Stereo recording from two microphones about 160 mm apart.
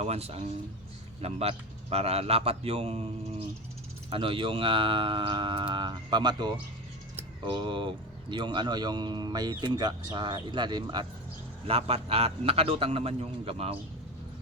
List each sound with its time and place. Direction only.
0.0 s speech: 40° right (ahead or behind)
11.6 s speech: 40° right (ahead or behind)